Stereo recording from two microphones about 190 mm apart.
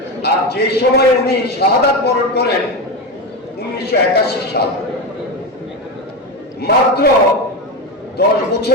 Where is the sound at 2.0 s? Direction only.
60° left (ahead or behind).